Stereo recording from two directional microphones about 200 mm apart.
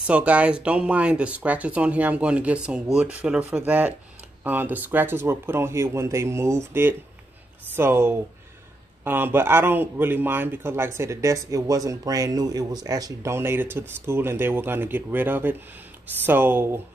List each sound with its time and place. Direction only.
0.0 s speech: 5° right (ahead or behind)